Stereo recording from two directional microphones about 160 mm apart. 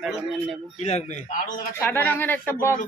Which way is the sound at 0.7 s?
45° left (ahead or behind).